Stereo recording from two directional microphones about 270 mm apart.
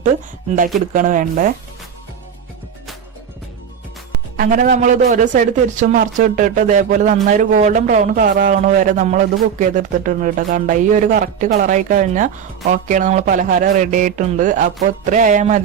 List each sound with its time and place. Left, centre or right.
0.9 s a man's voice: right
4.4 s a man's voice: right